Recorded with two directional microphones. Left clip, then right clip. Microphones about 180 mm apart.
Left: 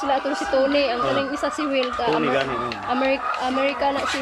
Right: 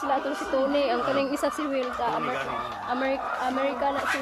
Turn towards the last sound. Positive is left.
turn(degrees=5)  # may be behind; listen again after turning